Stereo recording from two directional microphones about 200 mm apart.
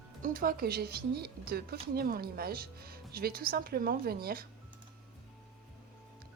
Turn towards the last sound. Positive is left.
turn(degrees=-50)  # may be behind; listen again after turning